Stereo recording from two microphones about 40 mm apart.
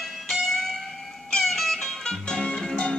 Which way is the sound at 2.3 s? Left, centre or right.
Left.